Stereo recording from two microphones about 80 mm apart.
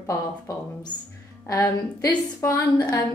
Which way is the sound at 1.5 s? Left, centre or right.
Left.